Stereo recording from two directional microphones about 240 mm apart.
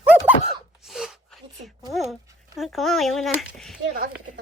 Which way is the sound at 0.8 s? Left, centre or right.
Centre.